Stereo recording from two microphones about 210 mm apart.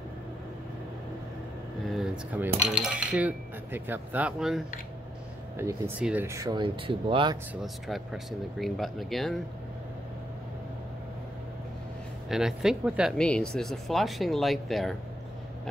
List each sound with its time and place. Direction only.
1.9 s cutlery: 5° right (ahead or behind)
5.6 s speech: 10° right (ahead or behind); by 7.3 s 25° right (ahead or behind)
7.6 s speech: centre (ahead or behind)
12.3 s speech: 5° right (ahead or behind)